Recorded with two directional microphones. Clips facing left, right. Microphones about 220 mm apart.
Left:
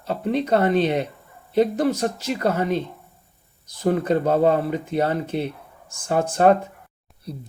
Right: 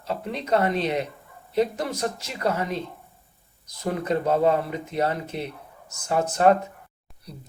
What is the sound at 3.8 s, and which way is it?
Speech, 30° left (ahead or behind).